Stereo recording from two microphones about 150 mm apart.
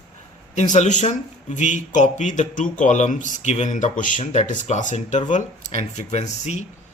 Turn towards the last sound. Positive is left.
turn(degrees=50)  # may be behind; listen again after turning